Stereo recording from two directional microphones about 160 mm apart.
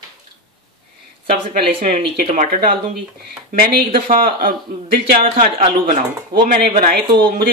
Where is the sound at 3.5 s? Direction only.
65° right (ahead or behind).